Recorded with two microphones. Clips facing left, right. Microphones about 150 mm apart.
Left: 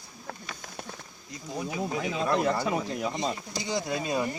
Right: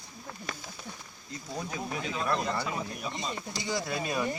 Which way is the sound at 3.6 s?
20° left (ahead or behind).